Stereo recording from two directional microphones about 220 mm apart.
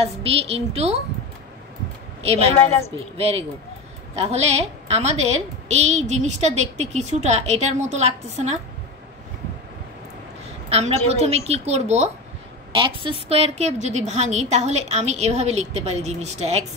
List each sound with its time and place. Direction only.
0.0 s a woman's voice: 25° right (ahead or behind)
2.2 s a woman's voice: 25° right (ahead or behind)
10.7 s a woman's voice: 30° right (ahead or behind)